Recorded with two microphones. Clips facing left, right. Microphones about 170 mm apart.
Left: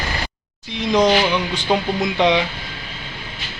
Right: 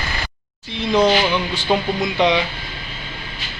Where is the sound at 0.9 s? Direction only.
15° left (ahead or behind).